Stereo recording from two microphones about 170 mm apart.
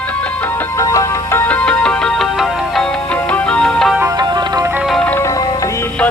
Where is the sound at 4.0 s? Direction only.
20° right (ahead or behind).